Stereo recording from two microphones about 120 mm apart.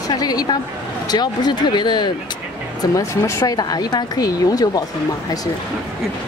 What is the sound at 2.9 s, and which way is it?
Speech, 25° left (ahead or behind).